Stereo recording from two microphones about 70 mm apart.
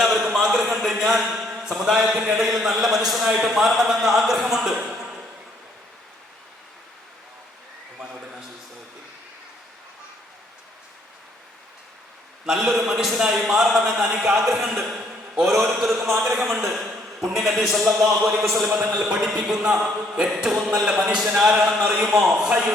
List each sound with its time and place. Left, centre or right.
0.0 s a man's voice: centre
12.5 s a man's voice: centre
18.9 s speech: centre